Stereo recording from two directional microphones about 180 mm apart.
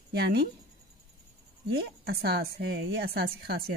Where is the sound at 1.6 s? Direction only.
65° right (ahead or behind).